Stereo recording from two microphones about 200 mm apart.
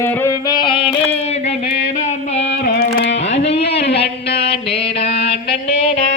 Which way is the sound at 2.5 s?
50° left (ahead or behind).